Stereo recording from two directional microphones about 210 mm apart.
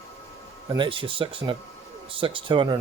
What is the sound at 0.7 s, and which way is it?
Speech, 25° right (ahead or behind).